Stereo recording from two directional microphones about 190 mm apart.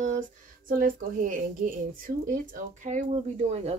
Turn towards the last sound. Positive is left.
turn(degrees=-35)  # may be behind; listen again after turning